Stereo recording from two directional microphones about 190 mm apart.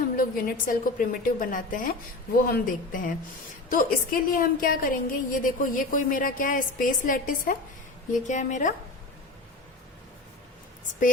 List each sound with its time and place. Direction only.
0.2 s a woman's voice: 50° left (ahead or behind)